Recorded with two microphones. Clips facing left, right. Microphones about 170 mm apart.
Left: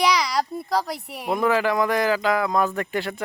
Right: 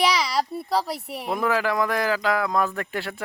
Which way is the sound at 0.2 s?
5° right (ahead or behind).